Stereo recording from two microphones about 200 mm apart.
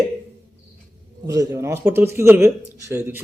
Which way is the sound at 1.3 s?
15° right (ahead or behind).